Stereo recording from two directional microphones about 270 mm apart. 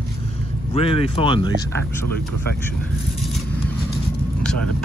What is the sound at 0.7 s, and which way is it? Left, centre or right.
Speech, left.